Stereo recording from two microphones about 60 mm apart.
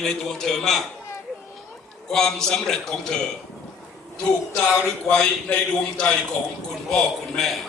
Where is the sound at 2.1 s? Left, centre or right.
Centre.